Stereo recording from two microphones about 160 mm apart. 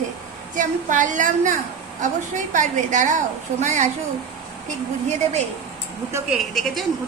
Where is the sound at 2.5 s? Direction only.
50° right (ahead or behind).